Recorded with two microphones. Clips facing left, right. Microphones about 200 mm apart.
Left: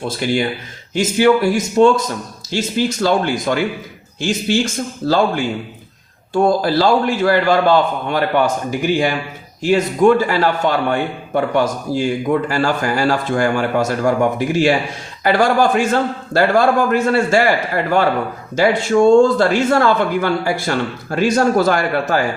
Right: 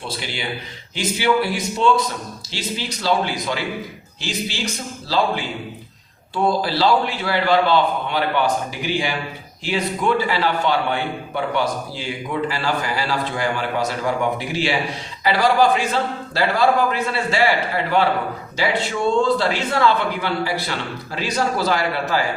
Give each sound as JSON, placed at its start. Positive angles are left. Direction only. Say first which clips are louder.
{"t": 0.0, "sound": "a man's voice", "louder": "left 10 dB", "side_deg": 45}
{"t": 18.5, "sound": "a man's voice", "louder": "left 9 dB", "side_deg": 45}